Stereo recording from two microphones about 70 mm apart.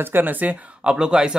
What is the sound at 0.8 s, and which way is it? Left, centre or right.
Speech, centre.